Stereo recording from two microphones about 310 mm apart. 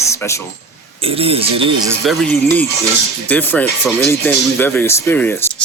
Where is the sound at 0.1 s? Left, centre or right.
Centre.